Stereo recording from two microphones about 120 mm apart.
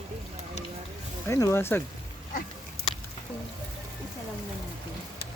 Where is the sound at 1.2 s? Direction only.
25° left (ahead or behind).